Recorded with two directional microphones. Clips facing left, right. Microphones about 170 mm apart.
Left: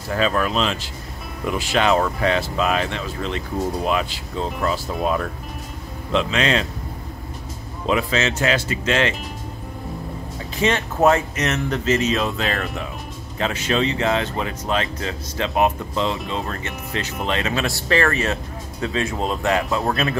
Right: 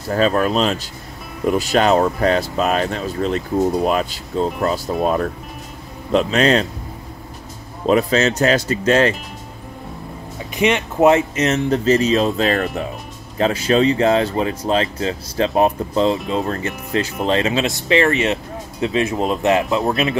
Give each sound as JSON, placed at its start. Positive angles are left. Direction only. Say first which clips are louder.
{"t": 0.1, "sound": "speech", "louder": "right 4 dB", "side_deg": -40}
{"t": 7.8, "sound": "speech", "louder": "right 5 dB", "side_deg": -40}
{"t": 10.5, "sound": "speech", "louder": "right 3 dB", "side_deg": -15}